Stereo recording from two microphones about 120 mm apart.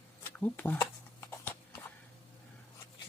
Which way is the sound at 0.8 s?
20° left (ahead or behind).